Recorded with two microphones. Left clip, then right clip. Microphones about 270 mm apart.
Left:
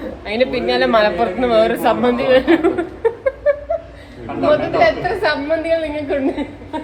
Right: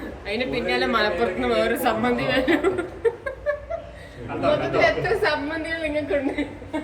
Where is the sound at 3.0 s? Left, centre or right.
Centre.